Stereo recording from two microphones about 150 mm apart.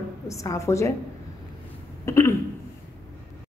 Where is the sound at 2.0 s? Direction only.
15° left (ahead or behind).